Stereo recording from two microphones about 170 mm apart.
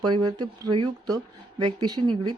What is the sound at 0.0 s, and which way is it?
Speech, 25° right (ahead or behind).